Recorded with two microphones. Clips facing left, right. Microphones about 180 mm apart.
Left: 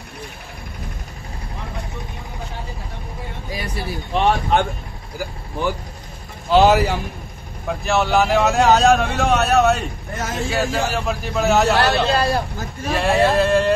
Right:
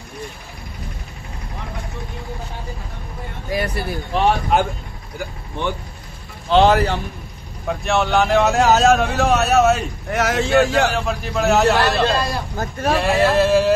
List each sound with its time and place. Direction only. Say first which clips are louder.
3.4 s a sound: right 8 dB; 60° right (ahead or behind)
4.1 s a man's voice: even; 5° right (ahead or behind)
10.1 s speech: right 7 dB; 75° right (ahead or behind)
10.5 s speech: right 5 dB; centre (ahead or behind)
12.5 s speech: right 4 dB; 70° right (ahead or behind)
13.0 s speech: left 1 dB; centre (ahead or behind)